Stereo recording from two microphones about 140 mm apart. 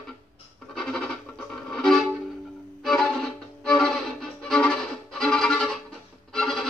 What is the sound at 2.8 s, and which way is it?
Violin, centre (ahead or behind).